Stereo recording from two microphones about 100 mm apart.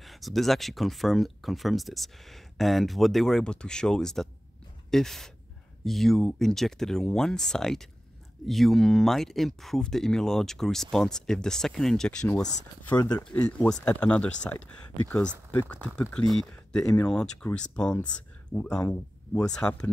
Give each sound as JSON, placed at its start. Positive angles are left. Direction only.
{"t": 0.0, "sound": "speech", "side_deg": 0}
{"t": 12.9, "sound": "speech", "side_deg": 40}
{"t": 13.2, "sound": "speech", "side_deg": 10}
{"t": 15.7, "sound": "speech", "side_deg": 10}